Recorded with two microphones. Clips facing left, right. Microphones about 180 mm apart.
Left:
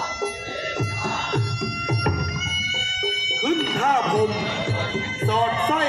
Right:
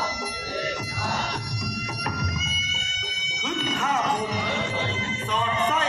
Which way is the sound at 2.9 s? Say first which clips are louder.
Left 11 dB; 60° left (ahead or behind).